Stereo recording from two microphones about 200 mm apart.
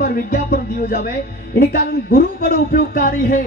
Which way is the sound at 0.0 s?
50° left (ahead or behind).